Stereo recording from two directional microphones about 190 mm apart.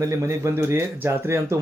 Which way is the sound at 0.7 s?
15° right (ahead or behind).